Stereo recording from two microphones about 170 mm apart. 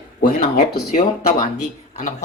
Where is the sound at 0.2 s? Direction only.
60° left (ahead or behind).